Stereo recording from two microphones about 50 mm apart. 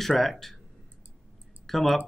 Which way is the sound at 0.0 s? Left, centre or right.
Centre.